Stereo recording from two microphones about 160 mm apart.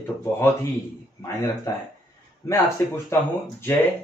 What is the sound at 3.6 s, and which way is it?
Speech, 15° left (ahead or behind).